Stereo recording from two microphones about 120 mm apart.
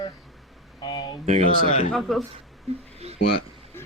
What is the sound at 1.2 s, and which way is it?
Speech, 70° right (ahead or behind).